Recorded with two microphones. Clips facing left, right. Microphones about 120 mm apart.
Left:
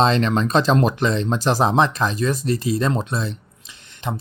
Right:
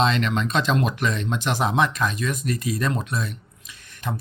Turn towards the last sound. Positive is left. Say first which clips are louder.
# left 3 dB
turn(degrees=25)  # may be behind; listen again after turning